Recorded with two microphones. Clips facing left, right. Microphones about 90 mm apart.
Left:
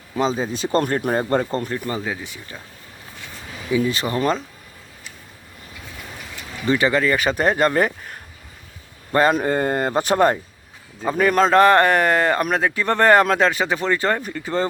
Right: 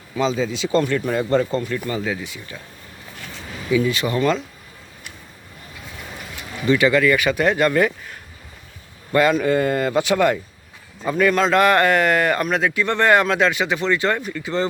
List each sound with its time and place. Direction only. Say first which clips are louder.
0.2 s speech: even; 45° left (ahead or behind)
2.1 s speech: right 2 dB; 25° left (ahead or behind)
3.7 s speech: right 1 dB; 30° left (ahead or behind)
6.7 s speech: right 2 dB; 30° left (ahead or behind)